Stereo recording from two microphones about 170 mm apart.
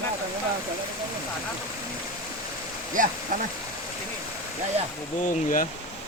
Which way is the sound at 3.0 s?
50° right (ahead or behind).